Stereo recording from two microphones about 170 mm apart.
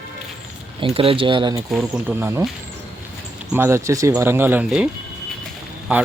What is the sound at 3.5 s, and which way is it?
Speech, 15° right (ahead or behind).